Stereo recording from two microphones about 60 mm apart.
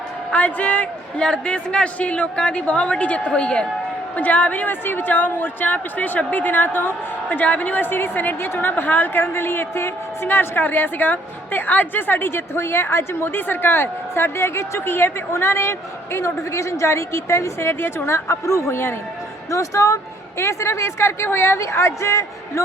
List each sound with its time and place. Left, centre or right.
0.3 s a woman's voice: left
7.9 s a woman's voice: left
19.5 s speech: left
20.4 s a woman's voice: left